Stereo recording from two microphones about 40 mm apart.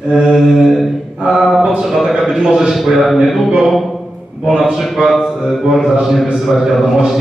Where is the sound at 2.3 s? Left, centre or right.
Centre.